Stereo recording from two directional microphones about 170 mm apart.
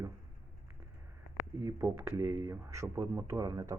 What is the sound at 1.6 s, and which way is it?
Speech, 15° right (ahead or behind).